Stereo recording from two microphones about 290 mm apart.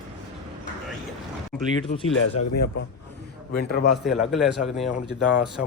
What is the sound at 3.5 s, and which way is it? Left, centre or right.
Speech, left.